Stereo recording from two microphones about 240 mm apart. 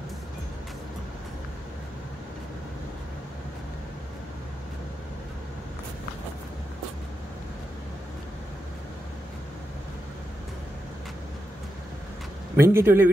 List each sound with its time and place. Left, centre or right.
12.5 s speech: centre